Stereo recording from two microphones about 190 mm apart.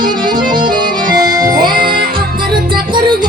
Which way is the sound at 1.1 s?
20° right (ahead or behind).